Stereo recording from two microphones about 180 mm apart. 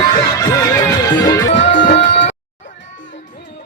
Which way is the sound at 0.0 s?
20° left (ahead or behind).